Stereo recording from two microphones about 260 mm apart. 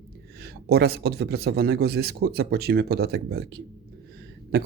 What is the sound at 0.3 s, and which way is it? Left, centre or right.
Speech, right.